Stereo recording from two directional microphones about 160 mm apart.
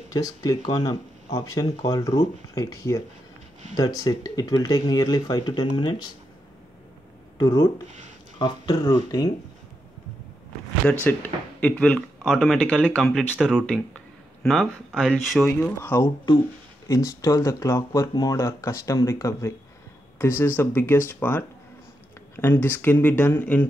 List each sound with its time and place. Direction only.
0.1 s speech: 25° left (ahead or behind)
7.3 s speech: 20° left (ahead or behind)
11.1 s speech: 10° left (ahead or behind)